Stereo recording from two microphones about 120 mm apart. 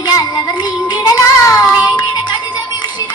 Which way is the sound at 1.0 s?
30° left (ahead or behind).